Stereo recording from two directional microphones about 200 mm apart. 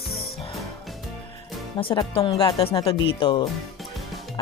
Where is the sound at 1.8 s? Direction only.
25° left (ahead or behind).